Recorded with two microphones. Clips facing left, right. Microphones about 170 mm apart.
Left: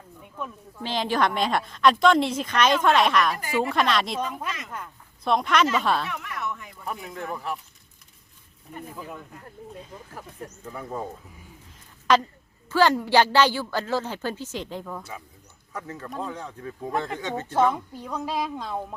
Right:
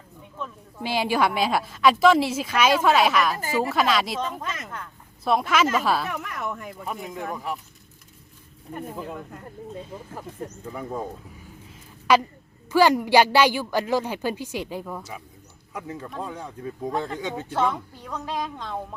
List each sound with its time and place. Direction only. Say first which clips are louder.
0.4 s speech: even; 10° left (ahead or behind)
0.8 s a woman's voice: right 2 dB; 10° right (ahead or behind)
5.2 s a woman's voice: even; 5° right (ahead or behind)
6.1 s speech: right 2 dB; 45° right (ahead or behind)
7.3 s speech: right 1 dB; 10° right (ahead or behind)
9.9 s speech: right 4 dB; 5° right (ahead or behind)
17.5 s a woman's voice: left 3 dB; 10° left (ahead or behind)